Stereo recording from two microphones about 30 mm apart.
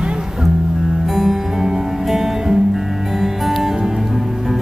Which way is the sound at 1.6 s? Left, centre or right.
Right.